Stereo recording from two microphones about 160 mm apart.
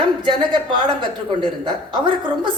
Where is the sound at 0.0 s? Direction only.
30° right (ahead or behind).